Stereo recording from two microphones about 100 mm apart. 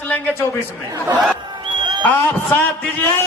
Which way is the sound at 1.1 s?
10° right (ahead or behind).